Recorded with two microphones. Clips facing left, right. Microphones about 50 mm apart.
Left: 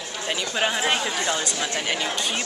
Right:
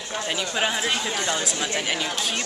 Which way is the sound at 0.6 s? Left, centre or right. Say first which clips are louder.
Left 2 dB; centre.